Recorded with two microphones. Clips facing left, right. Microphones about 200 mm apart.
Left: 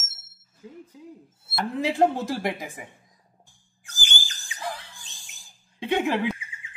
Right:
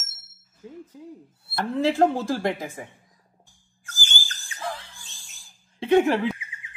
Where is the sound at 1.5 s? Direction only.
15° left (ahead or behind).